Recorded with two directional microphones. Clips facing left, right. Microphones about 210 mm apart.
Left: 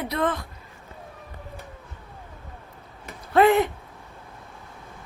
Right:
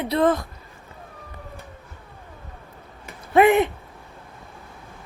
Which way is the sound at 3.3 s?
20° right (ahead or behind).